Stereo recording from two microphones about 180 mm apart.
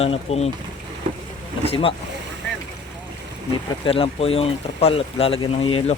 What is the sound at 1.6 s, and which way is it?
Speech, 30° left (ahead or behind).